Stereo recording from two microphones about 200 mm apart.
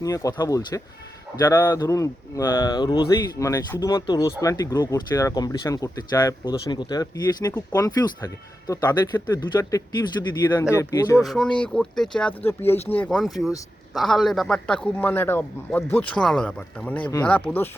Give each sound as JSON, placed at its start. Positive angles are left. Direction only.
{"t": 0.0, "sound": "a man's voice", "side_deg": 15}
{"t": 11.2, "sound": "a man's voice", "side_deg": 0}